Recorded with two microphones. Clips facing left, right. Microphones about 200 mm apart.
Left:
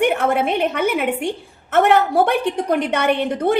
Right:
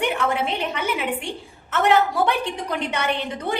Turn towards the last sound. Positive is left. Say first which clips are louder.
# left 8 dB
turn(degrees=60)  # may be behind; listen again after turning